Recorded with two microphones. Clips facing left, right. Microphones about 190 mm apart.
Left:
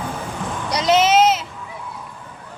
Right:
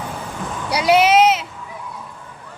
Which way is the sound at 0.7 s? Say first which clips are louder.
Right 2 dB; 10° right (ahead or behind).